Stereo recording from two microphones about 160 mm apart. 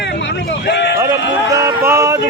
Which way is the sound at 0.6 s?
90° left.